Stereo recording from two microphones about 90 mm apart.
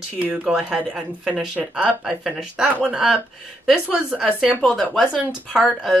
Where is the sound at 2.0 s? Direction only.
5° right (ahead or behind).